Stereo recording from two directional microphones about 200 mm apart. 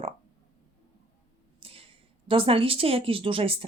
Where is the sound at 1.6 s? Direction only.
30° right (ahead or behind).